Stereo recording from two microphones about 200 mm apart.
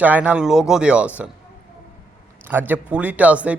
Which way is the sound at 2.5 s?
10° right (ahead or behind).